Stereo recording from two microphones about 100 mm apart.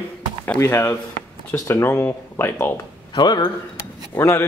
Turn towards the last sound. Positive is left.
turn(degrees=25)  # may be behind; listen again after turning